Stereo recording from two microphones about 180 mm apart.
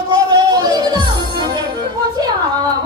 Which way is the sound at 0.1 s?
20° right (ahead or behind).